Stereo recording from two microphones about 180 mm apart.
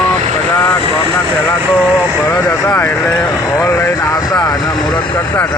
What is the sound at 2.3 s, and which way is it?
Speech, 15° left (ahead or behind).